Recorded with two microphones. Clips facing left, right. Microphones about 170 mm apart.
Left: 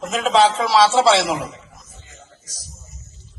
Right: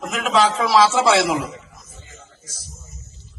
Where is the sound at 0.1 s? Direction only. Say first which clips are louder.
Left 3 dB; 30° left (ahead or behind).